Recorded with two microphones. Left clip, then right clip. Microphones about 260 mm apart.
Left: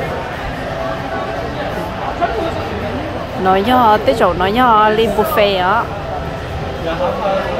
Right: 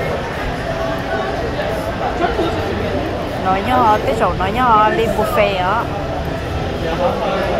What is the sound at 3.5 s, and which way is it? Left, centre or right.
Speech, left.